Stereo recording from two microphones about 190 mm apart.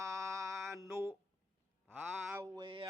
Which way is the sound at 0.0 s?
15° right (ahead or behind).